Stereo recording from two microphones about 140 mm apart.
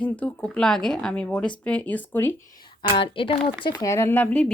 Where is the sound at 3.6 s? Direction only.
25° left (ahead or behind).